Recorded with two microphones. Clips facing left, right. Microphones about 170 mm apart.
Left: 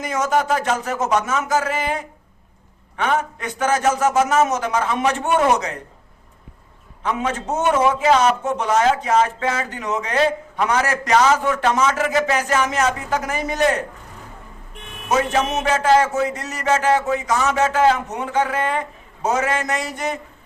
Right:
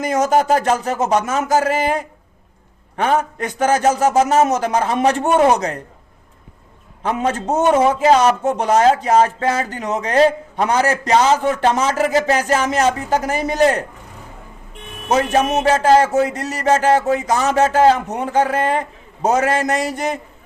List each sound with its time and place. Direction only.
0.0 s a man's voice: 35° right (ahead or behind)
7.0 s a man's voice: 35° right (ahead or behind)
15.6 s a man's voice: 35° right (ahead or behind)